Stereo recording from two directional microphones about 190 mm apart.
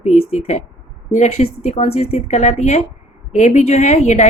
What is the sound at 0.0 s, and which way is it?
A woman's voice, 35° left (ahead or behind).